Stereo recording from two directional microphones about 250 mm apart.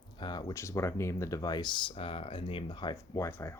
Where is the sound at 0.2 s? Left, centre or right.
Centre.